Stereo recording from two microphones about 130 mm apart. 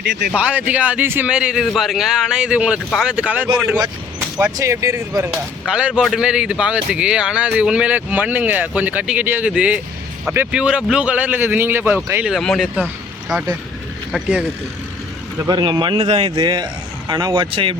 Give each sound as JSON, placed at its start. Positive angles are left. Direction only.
{"t": 0.3, "sound": "speech", "side_deg": -10}
{"t": 4.5, "sound": "speech", "side_deg": -25}
{"t": 5.3, "sound": "speech", "side_deg": -5}
{"t": 12.2, "sound": "speech", "side_deg": 0}
{"t": 15.4, "sound": "speech", "side_deg": -35}
{"t": 16.0, "sound": "a man's voice", "side_deg": -55}
{"t": 16.4, "sound": "speech", "side_deg": -35}
{"t": 17.5, "sound": "speech", "side_deg": -40}